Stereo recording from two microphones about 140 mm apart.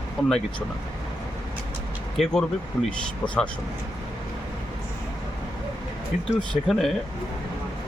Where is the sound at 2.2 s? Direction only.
Centre (ahead or behind).